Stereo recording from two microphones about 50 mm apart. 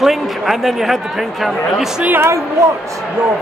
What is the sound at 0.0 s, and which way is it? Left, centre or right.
Speech, centre.